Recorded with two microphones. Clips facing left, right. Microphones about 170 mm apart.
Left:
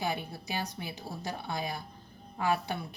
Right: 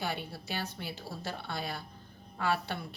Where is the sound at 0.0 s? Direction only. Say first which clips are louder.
Left 2 dB; 15° left (ahead or behind).